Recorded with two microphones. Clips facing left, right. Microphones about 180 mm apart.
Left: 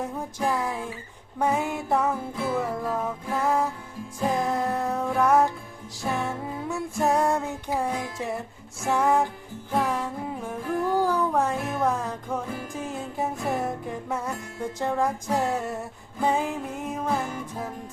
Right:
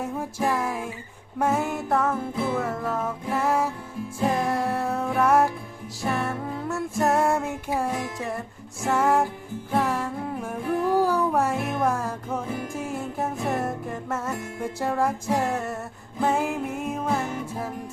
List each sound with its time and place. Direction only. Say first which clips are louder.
0.0 s music: right 1 dB; 5° right (ahead or behind)